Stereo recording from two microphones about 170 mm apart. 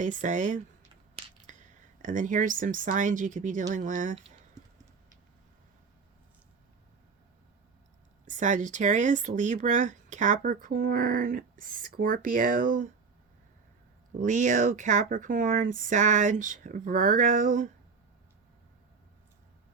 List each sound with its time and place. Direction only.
0.0 s speech: 50° right (ahead or behind)
8.2 s speech: 45° right (ahead or behind)
14.2 s speech: 45° right (ahead or behind)